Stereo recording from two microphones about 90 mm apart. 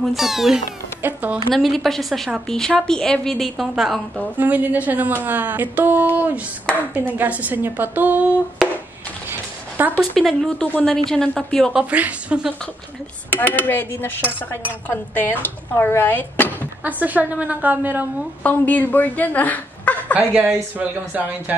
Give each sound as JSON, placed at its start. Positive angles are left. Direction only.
{"t": 0.0, "sound": "a woman's voice", "side_deg": -5}
{"t": 1.0, "sound": "a woman's voice", "side_deg": -20}
{"t": 1.5, "sound": "a woman's voice", "side_deg": 0}
{"t": 4.4, "sound": "a woman's voice", "side_deg": -15}
{"t": 8.6, "sound": "a sound", "side_deg": 0}
{"t": 9.8, "sound": "speech", "side_deg": -20}
{"t": 10.1, "sound": "a woman's voice", "side_deg": 5}
{"t": 11.7, "sound": "a woman's voice", "side_deg": -15}
{"t": 13.4, "sound": "speech", "side_deg": 20}
{"t": 16.8, "sound": "a woman's voice", "side_deg": -20}
{"t": 18.4, "sound": "a woman's voice", "side_deg": 20}
{"t": 20.2, "sound": "a woman's voice", "side_deg": -20}